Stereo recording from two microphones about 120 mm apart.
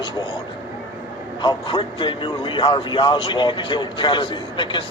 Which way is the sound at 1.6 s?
45° left (ahead or behind).